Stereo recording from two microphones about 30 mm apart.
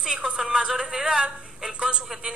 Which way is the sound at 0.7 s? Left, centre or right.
Centre.